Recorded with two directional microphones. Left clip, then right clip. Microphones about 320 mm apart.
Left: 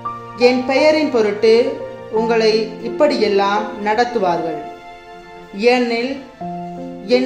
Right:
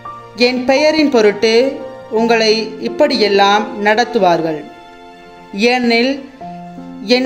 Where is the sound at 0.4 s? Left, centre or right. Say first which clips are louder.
Right 1 dB; right.